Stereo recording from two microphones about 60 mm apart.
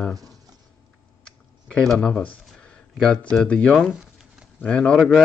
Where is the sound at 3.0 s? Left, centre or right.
Centre.